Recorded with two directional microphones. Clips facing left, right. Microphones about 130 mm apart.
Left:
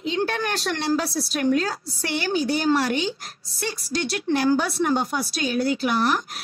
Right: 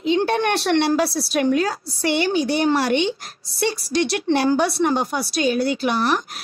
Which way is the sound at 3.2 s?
75° right (ahead or behind).